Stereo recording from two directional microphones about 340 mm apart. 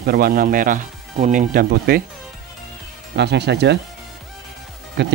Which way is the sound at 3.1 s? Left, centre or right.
Right.